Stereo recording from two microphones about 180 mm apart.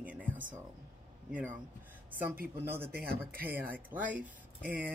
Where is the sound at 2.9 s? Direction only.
55° right (ahead or behind).